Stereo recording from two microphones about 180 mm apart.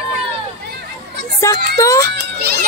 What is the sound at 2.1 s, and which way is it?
Speech, 55° right (ahead or behind).